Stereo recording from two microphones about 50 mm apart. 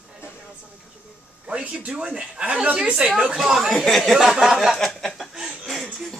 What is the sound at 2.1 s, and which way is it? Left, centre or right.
Speech, centre.